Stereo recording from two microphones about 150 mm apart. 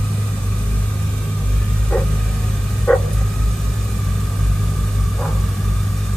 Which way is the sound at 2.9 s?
10° left (ahead or behind).